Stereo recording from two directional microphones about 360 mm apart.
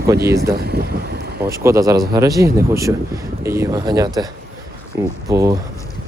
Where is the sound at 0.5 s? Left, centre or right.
Right.